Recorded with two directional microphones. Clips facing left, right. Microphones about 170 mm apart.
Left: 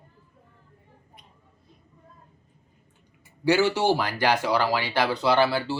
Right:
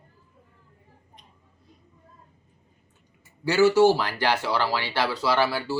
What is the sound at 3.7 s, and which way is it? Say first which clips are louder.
Speech: right 5 dB; 15° left (ahead or behind).